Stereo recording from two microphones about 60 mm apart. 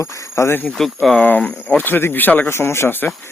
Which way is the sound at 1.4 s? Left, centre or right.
Left.